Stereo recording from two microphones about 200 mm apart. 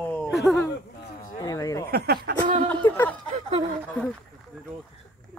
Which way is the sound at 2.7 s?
10° left (ahead or behind).